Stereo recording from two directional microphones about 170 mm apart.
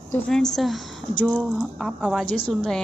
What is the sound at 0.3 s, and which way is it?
Speech, 5° left (ahead or behind).